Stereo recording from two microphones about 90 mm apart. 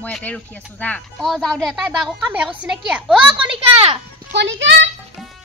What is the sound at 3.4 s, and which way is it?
Speech, 90° right.